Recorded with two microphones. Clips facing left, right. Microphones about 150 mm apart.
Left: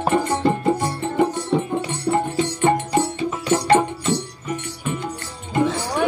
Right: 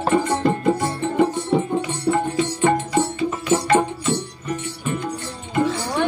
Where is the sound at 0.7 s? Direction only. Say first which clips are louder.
Even; 15° left (ahead or behind).